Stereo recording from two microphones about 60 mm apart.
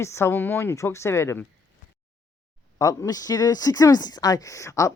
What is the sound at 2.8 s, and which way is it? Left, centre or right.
Speech, left.